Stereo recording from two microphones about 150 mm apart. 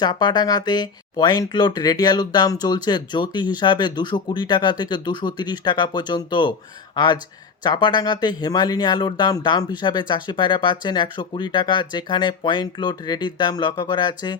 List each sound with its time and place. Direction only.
0.0 s speech: 30° left (ahead or behind)